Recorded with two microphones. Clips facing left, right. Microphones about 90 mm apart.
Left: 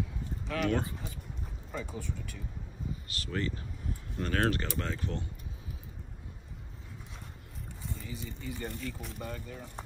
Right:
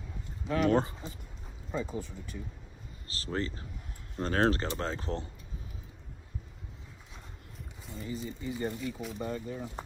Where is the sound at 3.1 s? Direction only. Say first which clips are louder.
Right 2 dB; 30° right (ahead or behind).